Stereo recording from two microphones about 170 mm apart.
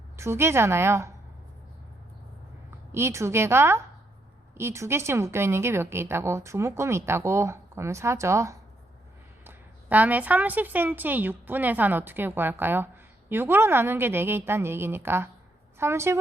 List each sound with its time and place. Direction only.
0.2 s a woman's voice: 15° right (ahead or behind)
2.6 s a woman's voice: 15° right (ahead or behind)